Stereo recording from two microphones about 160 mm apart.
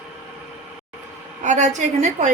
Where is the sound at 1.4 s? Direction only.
50° right (ahead or behind).